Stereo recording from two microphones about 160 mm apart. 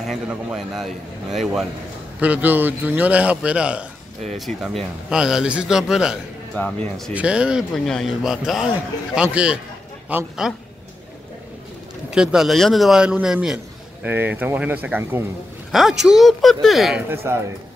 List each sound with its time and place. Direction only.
0.0 s a man's voice: 5° right (ahead or behind)
12.1 s a man's voice: 5° right (ahead or behind)
17.1 s a man's voice: 15° right (ahead or behind)